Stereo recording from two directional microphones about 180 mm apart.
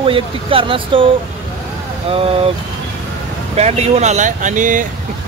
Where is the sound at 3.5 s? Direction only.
35° right (ahead or behind).